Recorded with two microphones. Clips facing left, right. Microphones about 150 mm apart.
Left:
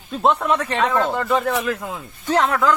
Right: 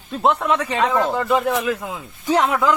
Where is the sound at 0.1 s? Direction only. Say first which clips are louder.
Even; centre (ahead or behind).